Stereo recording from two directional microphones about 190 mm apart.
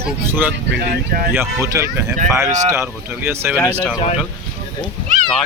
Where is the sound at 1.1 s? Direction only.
50° right (ahead or behind).